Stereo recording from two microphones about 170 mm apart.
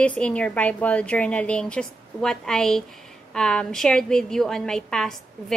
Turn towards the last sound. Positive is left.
turn(degrees=5)  # may be behind; listen again after turning